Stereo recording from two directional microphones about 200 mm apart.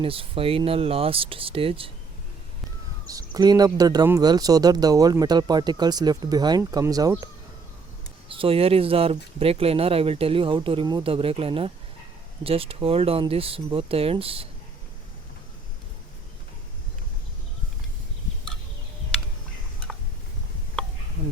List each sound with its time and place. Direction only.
0.0 s speech: 25° right (ahead or behind)
3.1 s speech: 20° right (ahead or behind)
8.3 s speech: 25° right (ahead or behind)